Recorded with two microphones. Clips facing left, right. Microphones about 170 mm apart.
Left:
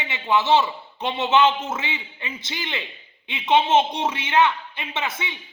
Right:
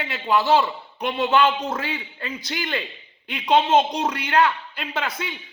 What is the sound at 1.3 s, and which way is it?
Speech, 25° left (ahead or behind).